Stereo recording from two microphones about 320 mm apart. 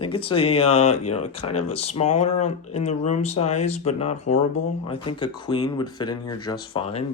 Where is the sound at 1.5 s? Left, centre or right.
Centre.